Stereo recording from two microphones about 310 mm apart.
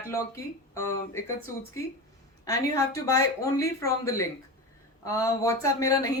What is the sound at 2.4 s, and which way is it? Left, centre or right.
Speech, centre.